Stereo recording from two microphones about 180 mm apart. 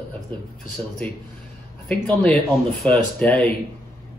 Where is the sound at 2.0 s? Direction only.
Centre (ahead or behind).